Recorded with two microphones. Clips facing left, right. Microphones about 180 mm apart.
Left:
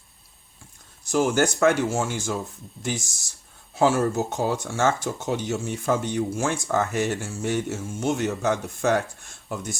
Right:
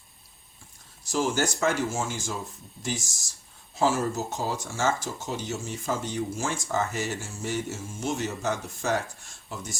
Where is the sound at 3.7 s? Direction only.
60° left (ahead or behind).